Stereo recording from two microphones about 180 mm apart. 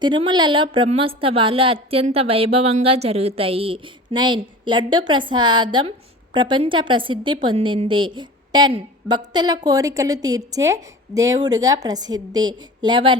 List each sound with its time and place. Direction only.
0.0 s a woman's voice: 25° right (ahead or behind)